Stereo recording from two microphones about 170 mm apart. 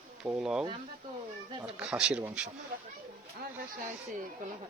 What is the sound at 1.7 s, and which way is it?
Speech, 5° right (ahead or behind).